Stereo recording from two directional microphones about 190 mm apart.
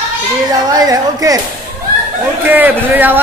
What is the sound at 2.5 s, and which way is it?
Speech, 10° right (ahead or behind).